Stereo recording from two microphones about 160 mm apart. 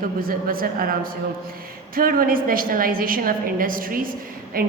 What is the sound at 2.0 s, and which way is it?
A woman's voice, 65° right (ahead or behind).